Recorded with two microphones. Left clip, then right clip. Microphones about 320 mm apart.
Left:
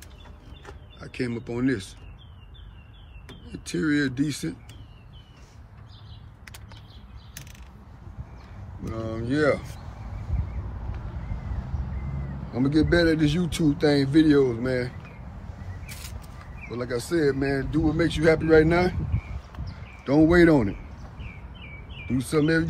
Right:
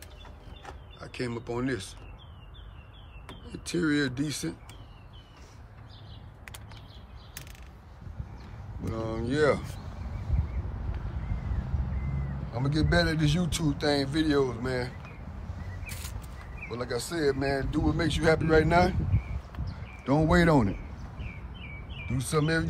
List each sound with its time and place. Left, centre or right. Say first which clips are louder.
0.9 s speech: left 4 dB; centre
3.5 s a man's voice: left 2 dB; centre
9.2 s a man's voice: left 2 dB; centre
12.5 s a man's voice: left 6 dB; centre
16.7 s a man's voice: left 6 dB; centre
19.6 s a sound: left 2 dB; centre
21.2 s bird vocalization: left 1 dB; right
22.2 s a man's voice: left 5 dB; centre